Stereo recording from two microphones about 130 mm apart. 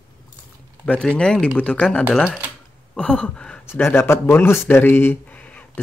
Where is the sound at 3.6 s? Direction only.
15° left (ahead or behind).